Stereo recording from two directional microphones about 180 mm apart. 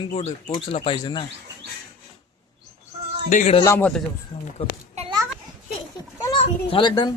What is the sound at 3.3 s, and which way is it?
Speech, 45° left (ahead or behind).